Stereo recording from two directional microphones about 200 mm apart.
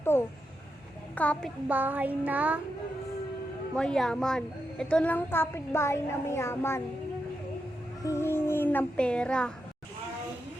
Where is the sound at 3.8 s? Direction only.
5° left (ahead or behind).